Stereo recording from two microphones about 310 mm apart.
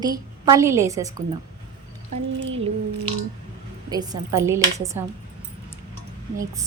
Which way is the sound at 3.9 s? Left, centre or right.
Centre.